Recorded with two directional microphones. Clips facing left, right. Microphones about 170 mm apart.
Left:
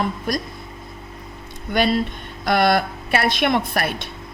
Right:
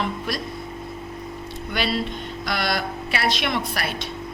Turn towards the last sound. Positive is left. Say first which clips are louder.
# left 5 dB
turn(degrees=55)  # may be behind; listen again after turning